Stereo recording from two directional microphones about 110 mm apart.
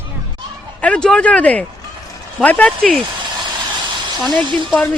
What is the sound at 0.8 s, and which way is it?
Speech, 10° left (ahead or behind).